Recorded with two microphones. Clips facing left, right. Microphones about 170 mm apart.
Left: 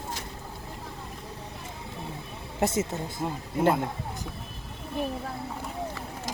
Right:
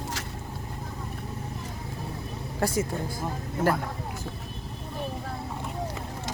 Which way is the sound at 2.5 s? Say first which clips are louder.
Even; 25° left (ahead or behind).